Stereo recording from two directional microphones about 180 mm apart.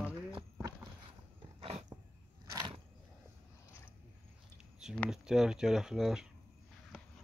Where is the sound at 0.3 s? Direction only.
25° right (ahead or behind).